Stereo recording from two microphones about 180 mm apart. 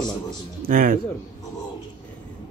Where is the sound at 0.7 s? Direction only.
50° right (ahead or behind).